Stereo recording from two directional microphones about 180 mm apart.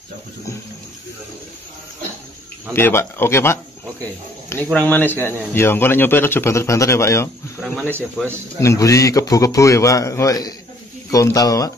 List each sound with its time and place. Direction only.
2.7 s a man's voice: 15° left (ahead or behind)
7.9 s speech: 10° right (ahead or behind)
8.5 s a man's voice: 15° left (ahead or behind)